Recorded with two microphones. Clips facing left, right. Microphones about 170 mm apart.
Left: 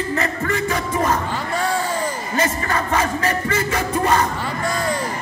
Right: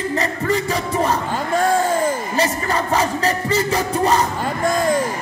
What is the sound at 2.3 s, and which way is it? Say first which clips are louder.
Music: right 1 dB; 35° right (ahead or behind).